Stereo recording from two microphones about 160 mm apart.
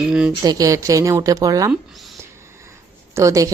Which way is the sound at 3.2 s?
20° right (ahead or behind).